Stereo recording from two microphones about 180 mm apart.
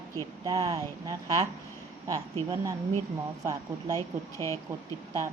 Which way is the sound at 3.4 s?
20° right (ahead or behind).